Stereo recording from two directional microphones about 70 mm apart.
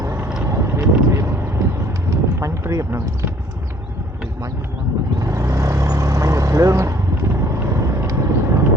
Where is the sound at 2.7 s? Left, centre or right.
Right.